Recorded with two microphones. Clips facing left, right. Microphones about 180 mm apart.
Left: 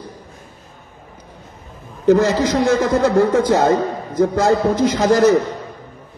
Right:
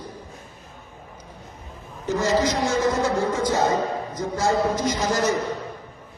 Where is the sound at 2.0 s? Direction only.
65° left (ahead or behind).